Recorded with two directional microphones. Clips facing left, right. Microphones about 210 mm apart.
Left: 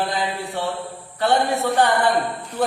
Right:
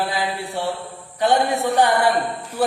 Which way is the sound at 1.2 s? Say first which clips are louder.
Right 1 dB; 15° right (ahead or behind).